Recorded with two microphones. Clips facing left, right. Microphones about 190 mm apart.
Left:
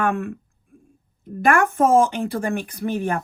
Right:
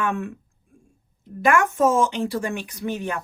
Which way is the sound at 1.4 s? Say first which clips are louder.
Left 1 dB; 55° left (ahead or behind).